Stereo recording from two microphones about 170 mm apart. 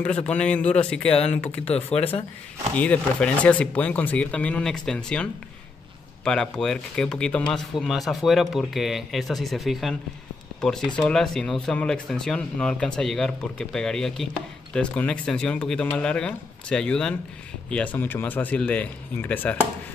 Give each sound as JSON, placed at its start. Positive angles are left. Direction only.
{"t": 0.3, "sound": "speech", "side_deg": 10}
{"t": 1.9, "sound": "speech", "side_deg": 35}
{"t": 2.7, "sound": "speech", "side_deg": 10}